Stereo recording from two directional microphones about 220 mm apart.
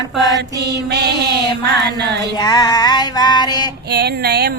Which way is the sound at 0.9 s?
50° right (ahead or behind).